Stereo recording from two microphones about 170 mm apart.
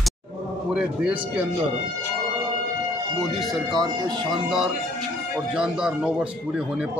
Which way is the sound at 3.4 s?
Centre (ahead or behind).